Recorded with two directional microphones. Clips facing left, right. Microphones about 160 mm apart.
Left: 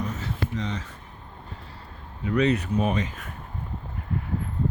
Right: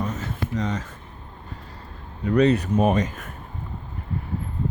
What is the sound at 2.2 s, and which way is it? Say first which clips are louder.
Speech: right 4 dB; 40° right (ahead or behind).